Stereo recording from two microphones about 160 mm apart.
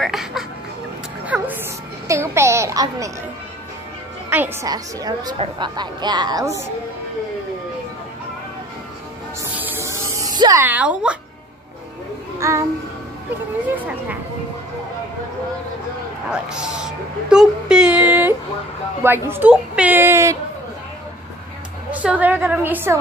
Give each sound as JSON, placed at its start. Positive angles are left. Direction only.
{"t": 0.0, "sound": "speech", "side_deg": 0}
{"t": 1.3, "sound": "music", "side_deg": -10}
{"t": 2.0, "sound": "a sound", "side_deg": -15}
{"t": 4.3, "sound": "a woman's voice", "side_deg": -10}
{"t": 4.6, "sound": "speech", "side_deg": -25}
{"t": 9.4, "sound": "music", "side_deg": -15}
{"t": 10.6, "sound": "a woman's voice", "side_deg": -10}
{"t": 12.4, "sound": "speech", "side_deg": -15}
{"t": 16.3, "sound": "a woman's voice", "side_deg": -5}
{"t": 21.9, "sound": "a woman's voice", "side_deg": -10}